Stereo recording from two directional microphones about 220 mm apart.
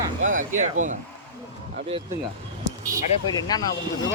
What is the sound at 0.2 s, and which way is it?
Speech, 35° right (ahead or behind).